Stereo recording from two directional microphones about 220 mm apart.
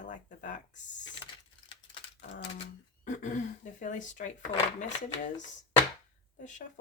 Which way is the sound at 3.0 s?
35° left (ahead or behind).